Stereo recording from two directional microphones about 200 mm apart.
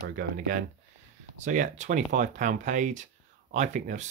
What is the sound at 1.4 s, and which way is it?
Speech, 40° right (ahead or behind).